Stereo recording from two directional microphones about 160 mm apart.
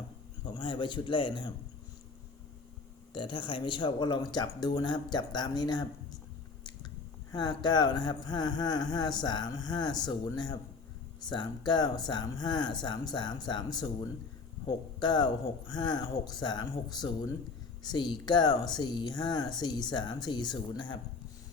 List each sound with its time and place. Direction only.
0.4 s speech: 30° left (ahead or behind)
3.1 s speech: 30° left (ahead or behind)
7.3 s speech: 25° left (ahead or behind)